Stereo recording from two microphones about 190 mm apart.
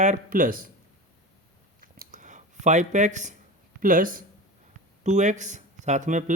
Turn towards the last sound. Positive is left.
turn(degrees=-40)  # may be behind; listen again after turning